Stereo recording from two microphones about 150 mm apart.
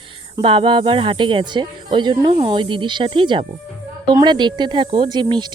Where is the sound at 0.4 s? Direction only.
35° right (ahead or behind).